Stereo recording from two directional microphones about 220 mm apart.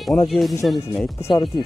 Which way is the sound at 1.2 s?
20° left (ahead or behind).